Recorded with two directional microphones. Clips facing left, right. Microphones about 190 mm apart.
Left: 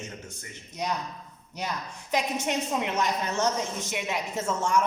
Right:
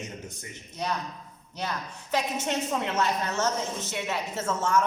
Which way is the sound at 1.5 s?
10° left (ahead or behind).